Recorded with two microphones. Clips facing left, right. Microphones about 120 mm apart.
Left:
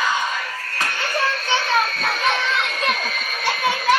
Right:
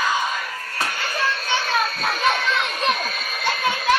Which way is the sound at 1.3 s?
Centre (ahead or behind).